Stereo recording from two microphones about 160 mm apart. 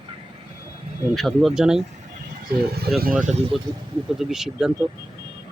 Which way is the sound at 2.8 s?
75° right (ahead or behind).